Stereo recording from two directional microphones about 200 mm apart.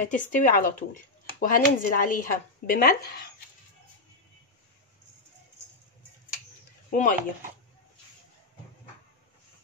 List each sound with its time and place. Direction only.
0.0 s speech: 40° left (ahead or behind)
6.9 s speech: 40° left (ahead or behind)